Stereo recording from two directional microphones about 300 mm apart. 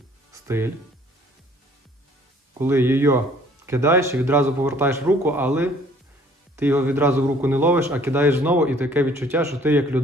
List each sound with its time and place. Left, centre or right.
0.4 s speech: centre
2.6 s a man's voice: centre